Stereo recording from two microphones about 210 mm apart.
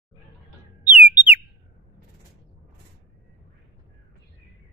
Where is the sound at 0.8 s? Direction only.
5° right (ahead or behind).